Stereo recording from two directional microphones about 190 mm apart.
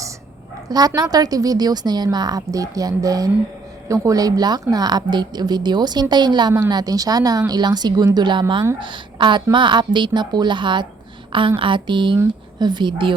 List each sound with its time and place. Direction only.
0.7 s a woman's voice: 20° right (ahead or behind)